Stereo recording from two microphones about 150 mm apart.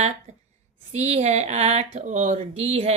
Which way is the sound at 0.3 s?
50° right (ahead or behind).